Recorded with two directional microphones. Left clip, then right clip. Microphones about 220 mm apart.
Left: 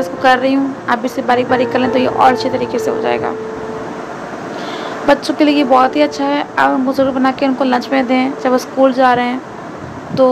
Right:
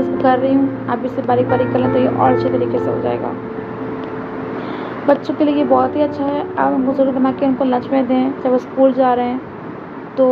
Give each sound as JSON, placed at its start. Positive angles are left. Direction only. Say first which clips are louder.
{"t": 0.2, "sound": "a woman's voice", "louder": "left 3 dB", "side_deg": 15}
{"t": 5.0, "sound": "a woman's voice", "louder": "left 3 dB", "side_deg": 15}